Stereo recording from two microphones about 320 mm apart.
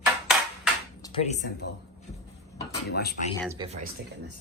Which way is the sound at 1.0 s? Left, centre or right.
Centre.